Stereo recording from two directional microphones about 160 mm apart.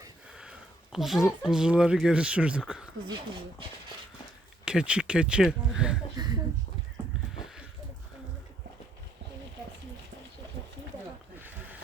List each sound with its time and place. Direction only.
0.9 s speech: 5° right (ahead or behind)
4.6 s speech: 5° right (ahead or behind)
6.1 s a sound: 25° right (ahead or behind)